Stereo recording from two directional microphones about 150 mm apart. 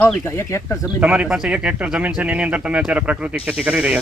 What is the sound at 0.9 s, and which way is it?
Speech, 10° right (ahead or behind).